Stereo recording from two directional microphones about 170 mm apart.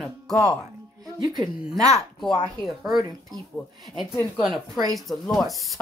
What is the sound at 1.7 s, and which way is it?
Speech, 20° right (ahead or behind).